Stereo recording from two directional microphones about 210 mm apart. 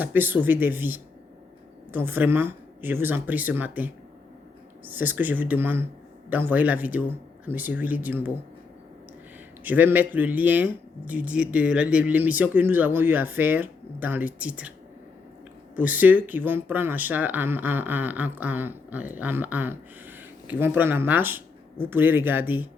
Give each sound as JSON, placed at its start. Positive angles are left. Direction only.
{"t": 0.0, "sound": "speech", "side_deg": -10}
{"t": 9.6, "sound": "speech", "side_deg": -10}
{"t": 15.7, "sound": "speech", "side_deg": -5}